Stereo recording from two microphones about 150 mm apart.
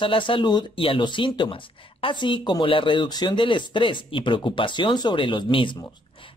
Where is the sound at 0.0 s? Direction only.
35° left (ahead or behind).